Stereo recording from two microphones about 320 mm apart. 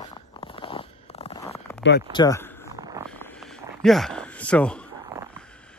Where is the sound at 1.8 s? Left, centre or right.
Left.